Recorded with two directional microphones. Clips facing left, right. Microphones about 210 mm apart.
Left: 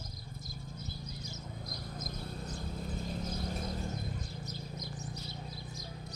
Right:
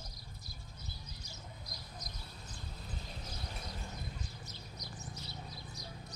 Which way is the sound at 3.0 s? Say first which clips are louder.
Left 10 dB; 45° left (ahead or behind).